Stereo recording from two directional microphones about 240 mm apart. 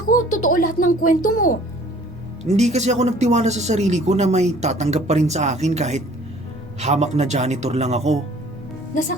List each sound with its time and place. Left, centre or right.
0.0 s music: left
0.4 s speech: left
2.5 s speech: right